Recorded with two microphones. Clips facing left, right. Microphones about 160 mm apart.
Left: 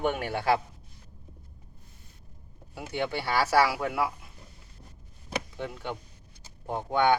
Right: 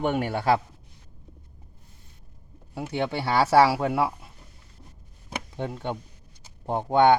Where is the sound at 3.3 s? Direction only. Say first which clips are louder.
Right 5 dB; 25° right (ahead or behind).